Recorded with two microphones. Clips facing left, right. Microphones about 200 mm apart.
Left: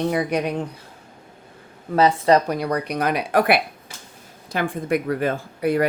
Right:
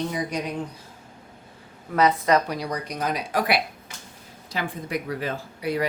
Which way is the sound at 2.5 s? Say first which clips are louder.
Left 6 dB; 55° left (ahead or behind).